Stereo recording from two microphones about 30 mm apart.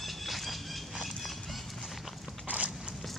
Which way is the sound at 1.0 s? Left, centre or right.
Centre.